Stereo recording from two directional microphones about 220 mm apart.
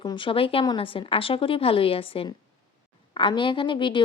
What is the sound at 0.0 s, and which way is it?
A woman's voice, 20° left (ahead or behind).